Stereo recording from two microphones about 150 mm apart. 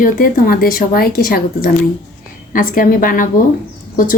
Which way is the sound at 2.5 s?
65° left (ahead or behind).